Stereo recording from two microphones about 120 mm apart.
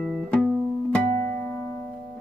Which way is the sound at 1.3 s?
15° left (ahead or behind).